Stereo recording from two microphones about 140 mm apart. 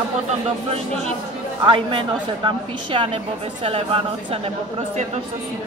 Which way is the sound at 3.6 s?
40° right (ahead or behind).